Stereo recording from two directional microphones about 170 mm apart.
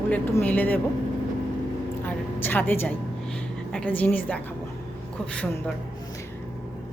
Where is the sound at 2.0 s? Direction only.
10° left (ahead or behind).